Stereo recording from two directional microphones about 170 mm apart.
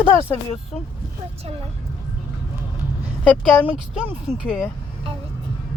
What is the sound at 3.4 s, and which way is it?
Speech, 5° right (ahead or behind).